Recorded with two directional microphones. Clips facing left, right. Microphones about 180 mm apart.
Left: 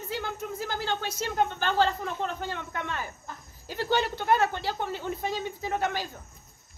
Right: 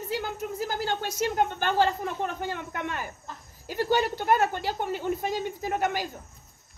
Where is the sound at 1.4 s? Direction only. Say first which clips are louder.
Even; 10° right (ahead or behind).